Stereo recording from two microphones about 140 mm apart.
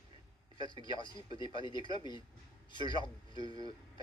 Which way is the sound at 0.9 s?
35° left (ahead or behind).